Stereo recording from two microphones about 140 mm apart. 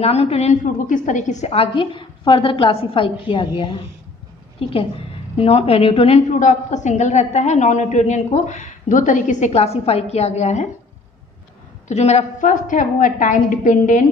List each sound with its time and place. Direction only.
0.0 s a woman's voice: 45° left (ahead or behind)
0.8 s a woman's voice: 65° left (ahead or behind); by 6.2 s 45° left (ahead or behind)
6.4 s a woman's voice: 60° left (ahead or behind)
11.9 s a woman's voice: 50° left (ahead or behind)